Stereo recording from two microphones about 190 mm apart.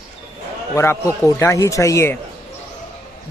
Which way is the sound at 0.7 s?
15° left (ahead or behind).